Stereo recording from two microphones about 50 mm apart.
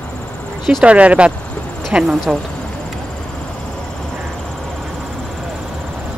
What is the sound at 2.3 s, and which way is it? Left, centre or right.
Speech, centre.